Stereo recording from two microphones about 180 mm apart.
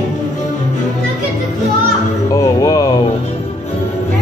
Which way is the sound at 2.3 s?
20° left (ahead or behind).